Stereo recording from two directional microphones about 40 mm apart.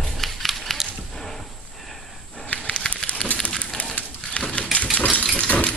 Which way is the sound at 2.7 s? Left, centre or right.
Left.